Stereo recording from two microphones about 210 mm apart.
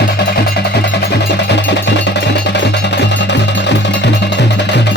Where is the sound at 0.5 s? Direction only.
50° left (ahead or behind).